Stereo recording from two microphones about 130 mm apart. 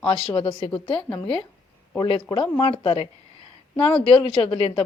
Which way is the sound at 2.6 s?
45° left (ahead or behind).